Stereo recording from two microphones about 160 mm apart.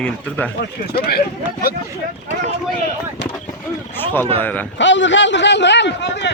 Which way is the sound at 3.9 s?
15° left (ahead or behind).